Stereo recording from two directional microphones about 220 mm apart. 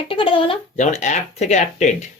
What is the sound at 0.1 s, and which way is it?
Speech, 25° left (ahead or behind).